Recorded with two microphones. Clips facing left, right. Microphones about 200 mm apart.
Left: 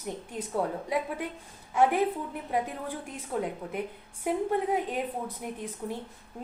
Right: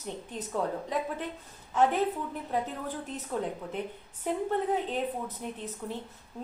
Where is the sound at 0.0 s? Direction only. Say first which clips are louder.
Left 2 dB; 10° left (ahead or behind).